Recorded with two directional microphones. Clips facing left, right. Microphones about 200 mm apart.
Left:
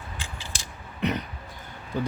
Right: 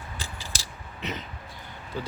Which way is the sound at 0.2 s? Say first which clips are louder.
Even; 40° right (ahead or behind).